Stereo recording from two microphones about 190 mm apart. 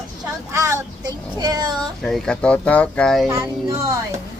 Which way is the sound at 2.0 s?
Centre (ahead or behind).